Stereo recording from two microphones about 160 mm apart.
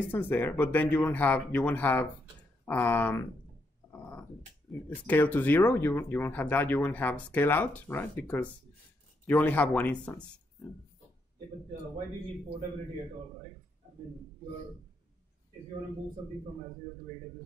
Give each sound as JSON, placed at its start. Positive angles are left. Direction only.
{"t": 0.1, "sound": "speech", "side_deg": 10}
{"t": 3.9, "sound": "dog", "side_deg": 10}
{"t": 4.8, "sound": "speech", "side_deg": 10}